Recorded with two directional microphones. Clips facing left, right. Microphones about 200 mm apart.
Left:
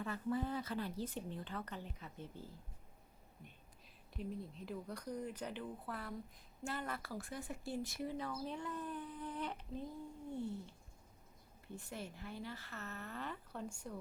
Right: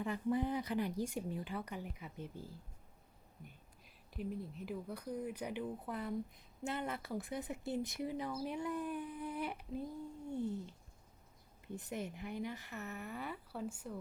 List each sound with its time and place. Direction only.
0.0 s speech: 15° right (ahead or behind)
4.1 s speech: 5° right (ahead or behind)